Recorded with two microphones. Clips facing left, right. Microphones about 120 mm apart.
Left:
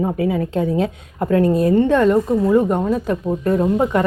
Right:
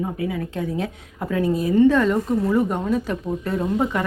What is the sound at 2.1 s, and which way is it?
Speech, 20° left (ahead or behind).